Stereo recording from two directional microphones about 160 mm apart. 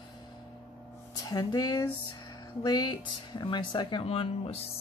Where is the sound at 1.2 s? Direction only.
25° left (ahead or behind).